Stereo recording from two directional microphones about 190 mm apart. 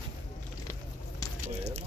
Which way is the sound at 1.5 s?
35° right (ahead or behind).